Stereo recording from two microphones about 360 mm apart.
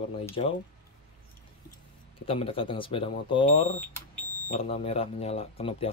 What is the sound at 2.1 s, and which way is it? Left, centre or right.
Speech, centre.